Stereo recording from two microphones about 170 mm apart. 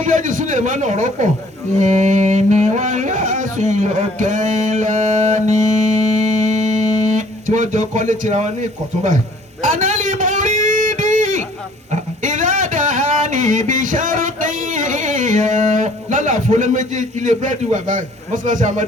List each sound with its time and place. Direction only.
0.0 s a man's voice: 45° right (ahead or behind)
9.6 s guitar: 45° right (ahead or behind)
11.9 s a sound: 50° right (ahead or behind)